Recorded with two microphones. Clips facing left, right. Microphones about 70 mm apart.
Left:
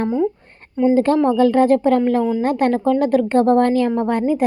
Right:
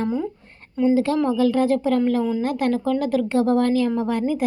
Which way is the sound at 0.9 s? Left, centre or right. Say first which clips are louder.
Left 5 dB; left.